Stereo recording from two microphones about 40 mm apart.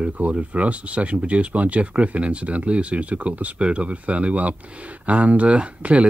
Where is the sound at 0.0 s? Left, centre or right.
Right.